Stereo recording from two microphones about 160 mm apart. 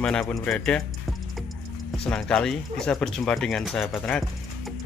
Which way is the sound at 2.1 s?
5° left (ahead or behind).